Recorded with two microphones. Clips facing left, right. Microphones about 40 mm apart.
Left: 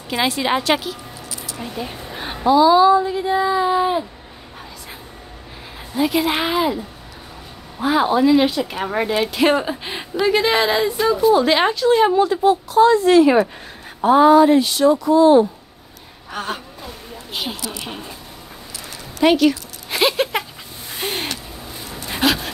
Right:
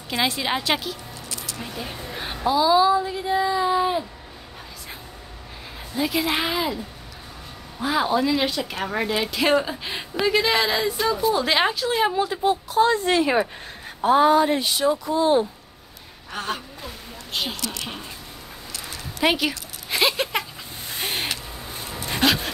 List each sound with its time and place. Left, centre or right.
0.1 s speech: centre
1.6 s a sound: centre
2.4 s a woman's voice: centre
5.9 s a woman's voice: centre
7.8 s a woman's voice: centre
12.8 s speech: centre
14.3 s speech: centre
16.3 s a woman's voice: centre
19.1 s speech: centre
19.9 s a sound: centre
20.9 s gasp: centre
22.1 s dog: centre